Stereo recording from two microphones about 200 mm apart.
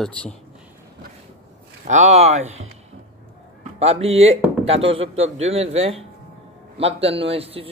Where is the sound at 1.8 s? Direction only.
35° right (ahead or behind).